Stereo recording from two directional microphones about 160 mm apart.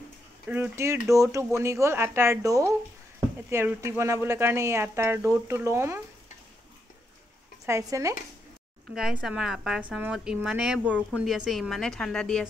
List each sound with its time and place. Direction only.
0.5 s speech: 15° right (ahead or behind)
7.6 s speech: 20° right (ahead or behind)
8.9 s a woman's voice: 5° right (ahead or behind)